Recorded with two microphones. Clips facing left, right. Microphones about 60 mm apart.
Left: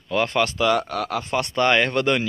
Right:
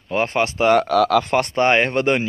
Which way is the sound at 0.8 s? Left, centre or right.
Right.